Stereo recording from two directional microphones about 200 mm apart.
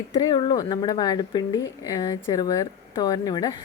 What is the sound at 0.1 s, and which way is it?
A woman's voice, 20° left (ahead or behind).